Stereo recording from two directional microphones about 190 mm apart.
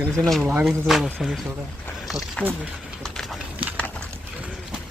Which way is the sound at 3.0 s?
5° right (ahead or behind).